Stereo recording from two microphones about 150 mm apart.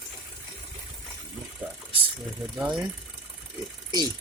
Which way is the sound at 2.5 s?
5° right (ahead or behind).